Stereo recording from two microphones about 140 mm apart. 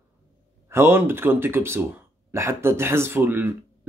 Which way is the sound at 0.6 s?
15° right (ahead or behind).